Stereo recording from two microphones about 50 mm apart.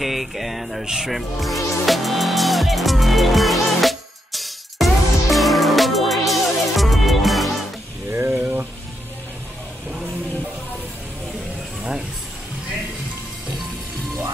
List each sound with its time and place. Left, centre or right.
0.0 s music: centre
8.1 s a sound: right
8.4 s music: right